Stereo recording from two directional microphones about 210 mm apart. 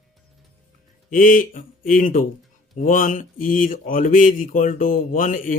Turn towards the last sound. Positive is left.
turn(degrees=40)  # may be behind; listen again after turning